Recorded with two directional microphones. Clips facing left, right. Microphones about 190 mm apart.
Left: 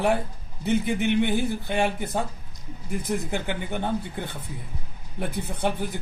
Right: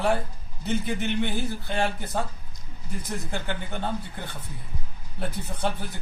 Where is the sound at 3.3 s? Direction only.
15° left (ahead or behind).